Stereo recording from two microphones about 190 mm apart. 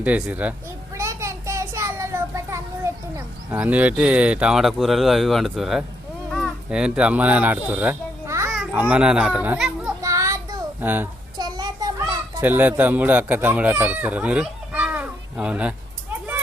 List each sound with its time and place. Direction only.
0.0 s speech: 5° right (ahead or behind)
0.9 s child singing: 15° right (ahead or behind)
6.3 s a child's voice: centre (ahead or behind)
10.0 s child singing: 15° right (ahead or behind)
11.3 s a sound: 20° right (ahead or behind)
12.4 s speech: 10° right (ahead or behind)